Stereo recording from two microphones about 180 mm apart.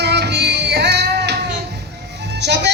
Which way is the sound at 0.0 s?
65° right (ahead or behind).